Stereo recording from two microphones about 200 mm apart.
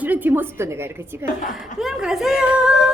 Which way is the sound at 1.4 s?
40° left (ahead or behind).